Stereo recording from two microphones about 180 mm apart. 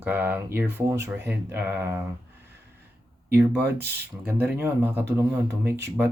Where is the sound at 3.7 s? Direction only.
65° right (ahead or behind).